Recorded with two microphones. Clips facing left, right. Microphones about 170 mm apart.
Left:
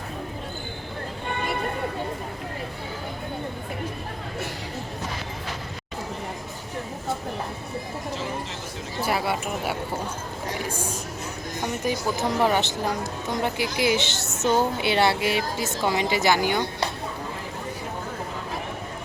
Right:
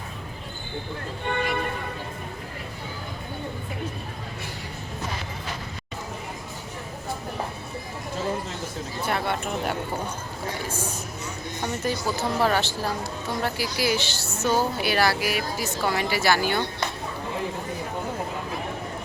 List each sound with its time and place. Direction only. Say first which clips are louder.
9.0 s speech: left 1 dB; 5° left (ahead or behind)
10.7 s music: left 1 dB; 10° left (ahead or behind)
11.6 s speech: left 1 dB; 15° left (ahead or behind)